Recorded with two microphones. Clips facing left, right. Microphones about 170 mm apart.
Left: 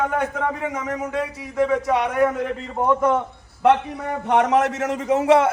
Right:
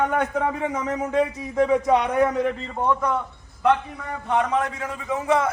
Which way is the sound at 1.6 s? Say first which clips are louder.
Right 1 dB; 15° right (ahead or behind).